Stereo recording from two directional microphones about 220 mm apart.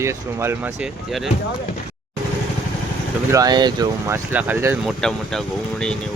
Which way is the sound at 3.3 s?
15° right (ahead or behind).